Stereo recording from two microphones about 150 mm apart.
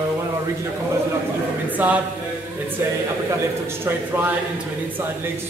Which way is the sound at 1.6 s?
10° right (ahead or behind).